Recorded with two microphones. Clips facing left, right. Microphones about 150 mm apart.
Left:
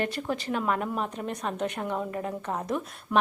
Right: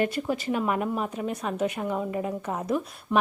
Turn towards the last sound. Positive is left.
turn(degrees=-5)  # may be behind; listen again after turning